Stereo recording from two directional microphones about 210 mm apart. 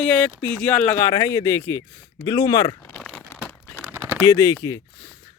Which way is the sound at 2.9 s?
5° left (ahead or behind).